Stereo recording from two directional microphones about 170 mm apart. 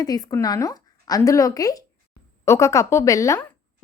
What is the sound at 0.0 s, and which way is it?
A woman's voice, 20° left (ahead or behind).